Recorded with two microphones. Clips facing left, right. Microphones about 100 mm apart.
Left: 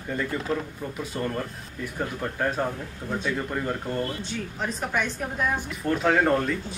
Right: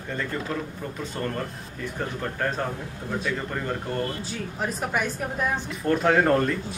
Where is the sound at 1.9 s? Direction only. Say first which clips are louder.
Left 1 dB; 5° left (ahead or behind).